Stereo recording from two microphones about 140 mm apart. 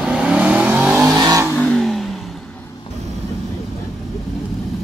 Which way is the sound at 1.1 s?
25° right (ahead or behind).